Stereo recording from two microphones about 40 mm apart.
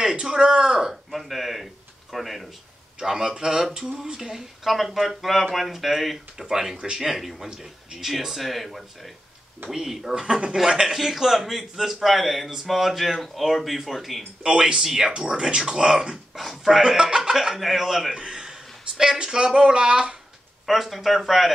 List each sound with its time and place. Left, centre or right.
0.0 s a sound: centre
3.0 s speech: centre
10.2 s speech: right; by 14.2 s centre
14.4 s speech: centre
15.1 s speech: right
16.3 s speech: centre
18.1 s a man's voice: centre
20.6 s speech: centre